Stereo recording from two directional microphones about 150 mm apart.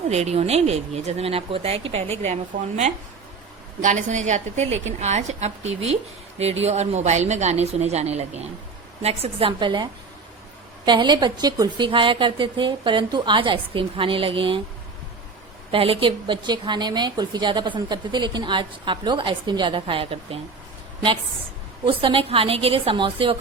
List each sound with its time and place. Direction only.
0.1 s a woman's voice: 45° right (ahead or behind)
15.7 s a woman's voice: 40° right (ahead or behind)
21.8 s a woman's voice: 35° right (ahead or behind)